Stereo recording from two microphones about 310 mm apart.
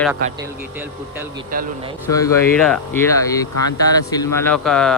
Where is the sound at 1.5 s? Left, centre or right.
Right.